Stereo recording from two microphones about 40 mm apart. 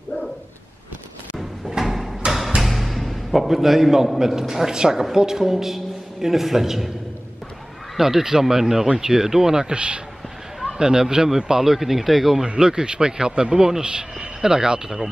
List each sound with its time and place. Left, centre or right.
1.7 s a sound: centre
2.6 s music: centre
4.2 s a man's voice: centre
8.0 s a man's voice: centre
9.8 s speech: right; by 12.4 s centre
12.5 s speech: centre
13.8 s speech: right